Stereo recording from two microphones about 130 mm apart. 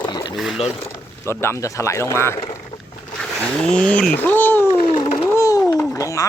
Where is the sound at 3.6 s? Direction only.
5° left (ahead or behind).